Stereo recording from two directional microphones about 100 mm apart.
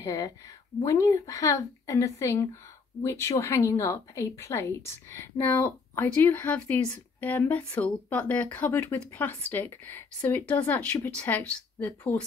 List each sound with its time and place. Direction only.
0.0 s a woman's voice: 35° left (ahead or behind); by 11.9 s 15° left (ahead or behind)